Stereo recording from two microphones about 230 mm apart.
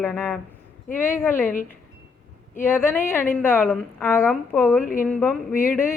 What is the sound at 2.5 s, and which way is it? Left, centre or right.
A woman's voice, centre.